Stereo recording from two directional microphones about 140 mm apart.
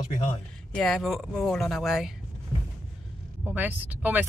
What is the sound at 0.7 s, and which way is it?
Speech, centre (ahead or behind).